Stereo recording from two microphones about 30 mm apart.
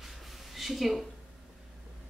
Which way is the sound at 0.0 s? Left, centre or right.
Centre.